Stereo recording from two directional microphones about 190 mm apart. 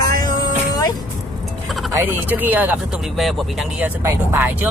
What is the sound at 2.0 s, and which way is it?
Speech, 10° right (ahead or behind).